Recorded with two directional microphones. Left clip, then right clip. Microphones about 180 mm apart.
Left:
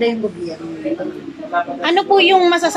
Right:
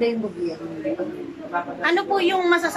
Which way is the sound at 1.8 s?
15° left (ahead or behind).